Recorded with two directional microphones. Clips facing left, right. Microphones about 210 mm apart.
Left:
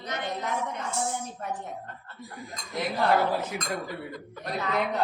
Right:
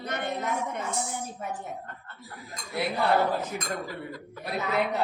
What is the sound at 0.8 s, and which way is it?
Speech, 5° right (ahead or behind).